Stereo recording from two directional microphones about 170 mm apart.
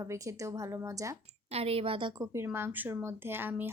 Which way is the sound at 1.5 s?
35° right (ahead or behind).